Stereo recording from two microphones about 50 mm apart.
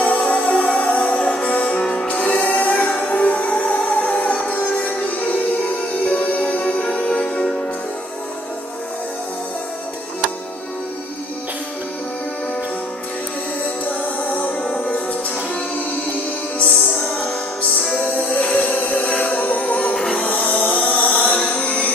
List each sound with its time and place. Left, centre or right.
0.2 s music: left
14.2 s music: left
14.6 s music: centre
16.5 s music: left
20.0 s music: centre
20.2 s music: left
21.3 s mantra: centre